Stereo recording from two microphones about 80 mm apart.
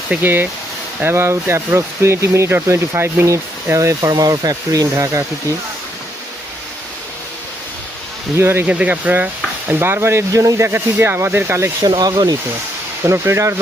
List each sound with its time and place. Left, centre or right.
0.2 s stir: right
1.0 s speech: right
4.1 s speech: right
8.4 s stir: right
8.6 s stir: centre
11.8 s speech: right
13.0 s speech: right